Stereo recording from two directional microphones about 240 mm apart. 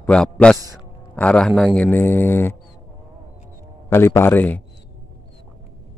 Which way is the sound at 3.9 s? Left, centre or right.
Centre.